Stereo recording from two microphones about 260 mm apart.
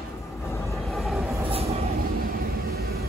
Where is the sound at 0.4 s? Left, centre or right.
Centre.